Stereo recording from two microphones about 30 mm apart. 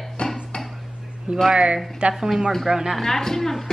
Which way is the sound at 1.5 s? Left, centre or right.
Right.